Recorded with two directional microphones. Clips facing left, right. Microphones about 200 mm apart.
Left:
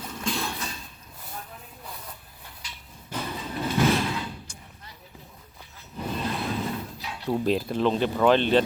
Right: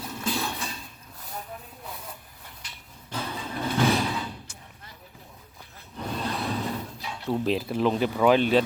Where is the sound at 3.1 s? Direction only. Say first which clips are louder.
Left 1 dB; 10° left (ahead or behind).